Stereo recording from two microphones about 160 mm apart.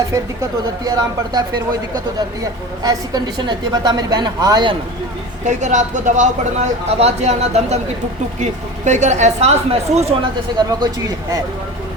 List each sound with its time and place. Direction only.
0.9 s a woman's voice: 25° right (ahead or behind)
2.8 s a woman's voice: 25° right (ahead or behind)
5.5 s speech: 50° right (ahead or behind)
10.6 s a woman's voice: 25° right (ahead or behind)